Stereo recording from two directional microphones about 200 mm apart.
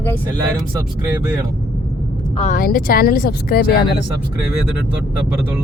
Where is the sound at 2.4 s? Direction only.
40° left (ahead or behind).